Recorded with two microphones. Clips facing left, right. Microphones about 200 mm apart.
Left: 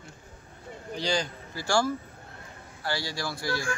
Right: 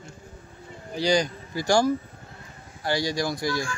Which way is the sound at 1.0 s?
15° right (ahead or behind).